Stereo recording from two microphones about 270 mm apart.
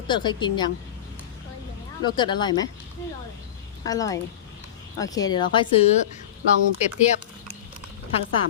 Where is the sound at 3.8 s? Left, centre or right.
Centre.